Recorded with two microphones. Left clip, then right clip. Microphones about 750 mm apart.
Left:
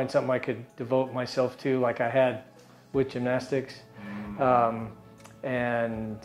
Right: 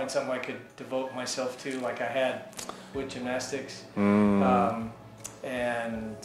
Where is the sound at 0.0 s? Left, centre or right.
Left.